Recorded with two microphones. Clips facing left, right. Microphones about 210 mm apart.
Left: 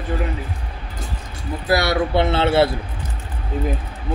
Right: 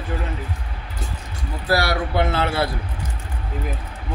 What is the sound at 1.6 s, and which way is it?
A man's voice, 20° left (ahead or behind).